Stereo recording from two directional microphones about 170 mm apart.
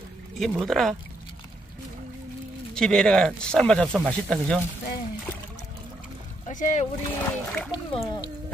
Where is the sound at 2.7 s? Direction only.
5° left (ahead or behind).